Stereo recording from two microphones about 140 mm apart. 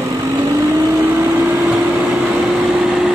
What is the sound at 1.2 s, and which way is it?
Vehicle, 15° right (ahead or behind).